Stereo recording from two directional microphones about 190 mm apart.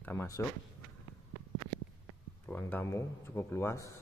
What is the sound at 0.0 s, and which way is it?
Speech, 15° left (ahead or behind).